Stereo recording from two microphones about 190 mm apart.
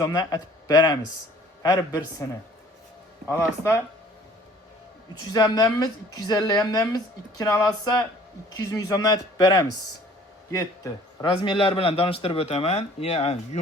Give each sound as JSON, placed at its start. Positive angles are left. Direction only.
{"t": 0.0, "sound": "a woman's voice", "side_deg": 20}
{"t": 3.2, "sound": "a man's voice", "side_deg": 15}
{"t": 5.3, "sound": "a woman's voice", "side_deg": 20}
{"t": 11.3, "sound": "a man's voice", "side_deg": 30}